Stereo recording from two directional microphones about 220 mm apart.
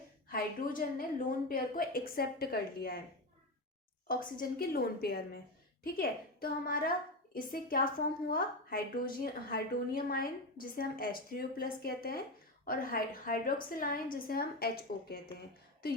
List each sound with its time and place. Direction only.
0.3 s a woman's voice: 40° left (ahead or behind)
4.1 s a woman's voice: 40° left (ahead or behind)